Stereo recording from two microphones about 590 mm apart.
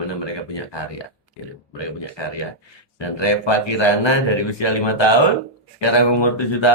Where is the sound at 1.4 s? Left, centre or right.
Left.